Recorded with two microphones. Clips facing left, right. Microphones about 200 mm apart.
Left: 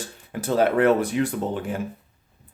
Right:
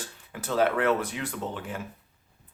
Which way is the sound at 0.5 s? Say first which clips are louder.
Left 5 dB; 45° left (ahead or behind).